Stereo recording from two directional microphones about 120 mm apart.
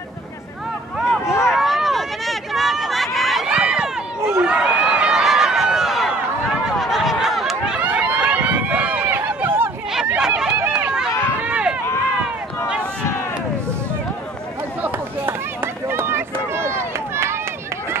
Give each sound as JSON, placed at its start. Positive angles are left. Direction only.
{"t": 1.2, "sound": "a sound", "side_deg": 25}
{"t": 1.5, "sound": "a sound", "side_deg": 0}
{"t": 3.2, "sound": "crowd", "side_deg": 0}
{"t": 3.5, "sound": "run", "side_deg": -5}
{"t": 4.2, "sound": "run", "side_deg": -20}
{"t": 4.5, "sound": "run", "side_deg": -10}
{"t": 6.6, "sound": "a sound", "side_deg": 0}
{"t": 11.4, "sound": "run", "side_deg": -10}
{"t": 14.8, "sound": "run", "side_deg": -20}